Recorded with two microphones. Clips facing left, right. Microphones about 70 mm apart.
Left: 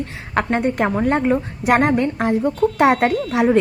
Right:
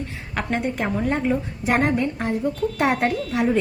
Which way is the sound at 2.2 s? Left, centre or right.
Left.